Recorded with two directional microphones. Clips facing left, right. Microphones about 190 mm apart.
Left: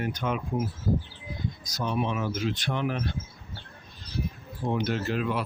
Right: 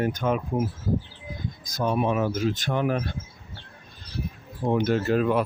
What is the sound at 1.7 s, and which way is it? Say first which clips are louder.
Speech: right 5 dB; 50° right (ahead or behind).